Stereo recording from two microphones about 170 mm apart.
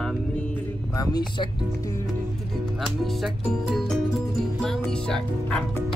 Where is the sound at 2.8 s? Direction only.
Centre (ahead or behind).